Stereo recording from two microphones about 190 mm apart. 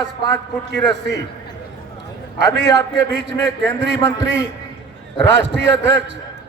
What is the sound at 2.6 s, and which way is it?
Speech, 65° right (ahead or behind).